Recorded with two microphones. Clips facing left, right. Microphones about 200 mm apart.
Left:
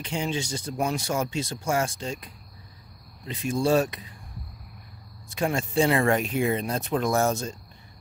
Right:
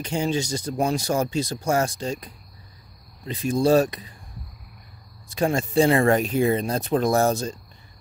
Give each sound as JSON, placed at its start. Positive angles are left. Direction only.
{"t": 0.0, "sound": "speech", "side_deg": -40}
{"t": 5.3, "sound": "speech", "side_deg": -35}